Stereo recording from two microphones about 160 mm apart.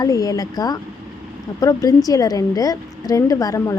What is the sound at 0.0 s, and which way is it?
Speech, 20° left (ahead or behind).